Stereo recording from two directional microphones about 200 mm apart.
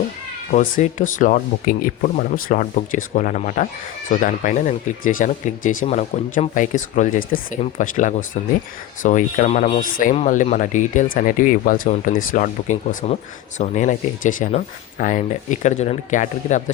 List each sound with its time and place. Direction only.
0.5 s speech: 40° left (ahead or behind)